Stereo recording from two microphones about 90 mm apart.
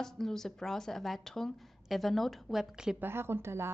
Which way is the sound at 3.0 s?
25° right (ahead or behind).